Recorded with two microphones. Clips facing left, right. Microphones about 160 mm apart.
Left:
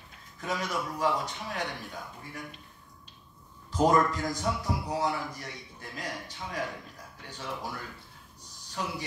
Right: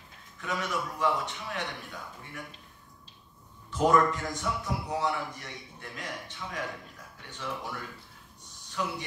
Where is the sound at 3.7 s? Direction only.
35° left (ahead or behind).